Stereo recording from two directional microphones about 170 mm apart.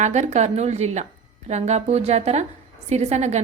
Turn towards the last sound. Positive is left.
turn(degrees=-40)  # may be behind; listen again after turning